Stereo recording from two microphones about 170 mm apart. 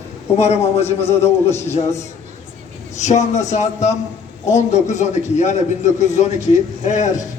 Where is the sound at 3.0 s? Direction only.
45° left (ahead or behind).